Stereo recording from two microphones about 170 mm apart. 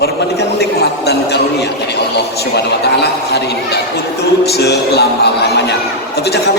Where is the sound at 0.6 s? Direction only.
70° left (ahead or behind).